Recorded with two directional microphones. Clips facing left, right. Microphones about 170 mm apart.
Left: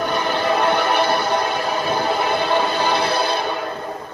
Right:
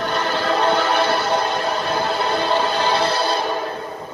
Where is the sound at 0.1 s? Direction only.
15° left (ahead or behind).